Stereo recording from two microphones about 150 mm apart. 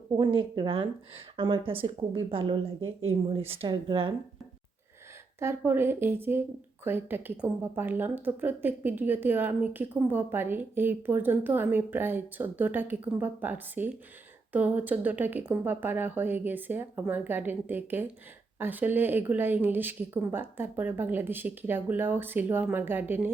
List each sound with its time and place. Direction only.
0.1 s speech: 35° right (ahead or behind)
5.4 s a woman's voice: 15° right (ahead or behind)